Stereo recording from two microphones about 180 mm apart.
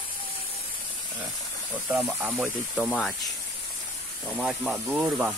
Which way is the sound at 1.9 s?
10° right (ahead or behind).